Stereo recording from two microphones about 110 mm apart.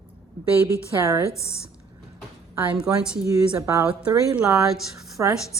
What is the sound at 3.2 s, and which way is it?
Speech, 25° right (ahead or behind).